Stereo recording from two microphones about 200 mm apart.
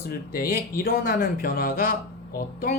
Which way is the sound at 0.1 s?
45° left (ahead or behind).